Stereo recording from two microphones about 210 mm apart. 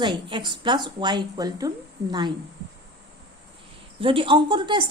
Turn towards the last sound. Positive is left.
turn(degrees=-20)  # may be behind; listen again after turning